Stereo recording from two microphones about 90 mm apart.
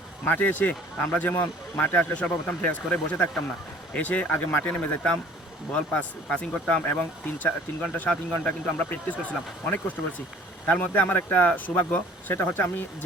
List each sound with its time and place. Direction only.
0.3 s speech: 20° left (ahead or behind)